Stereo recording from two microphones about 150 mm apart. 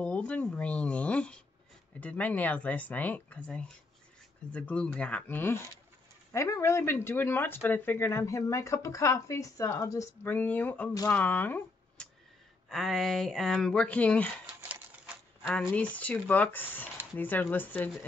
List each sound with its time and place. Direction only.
0.0 s speech: 10° left (ahead or behind)
12.6 s speech: centre (ahead or behind)
15.1 s a sound: 10° right (ahead or behind)
15.4 s speech: 10° left (ahead or behind)